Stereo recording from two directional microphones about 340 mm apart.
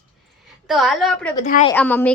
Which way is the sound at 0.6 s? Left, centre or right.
Centre.